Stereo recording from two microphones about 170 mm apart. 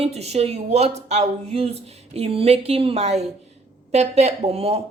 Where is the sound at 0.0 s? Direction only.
40° right (ahead or behind).